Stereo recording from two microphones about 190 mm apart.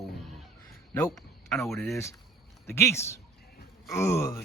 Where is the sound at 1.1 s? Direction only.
Centre (ahead or behind).